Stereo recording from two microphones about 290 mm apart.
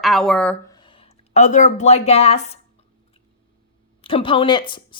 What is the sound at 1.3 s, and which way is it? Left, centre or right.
A woman's voice, left.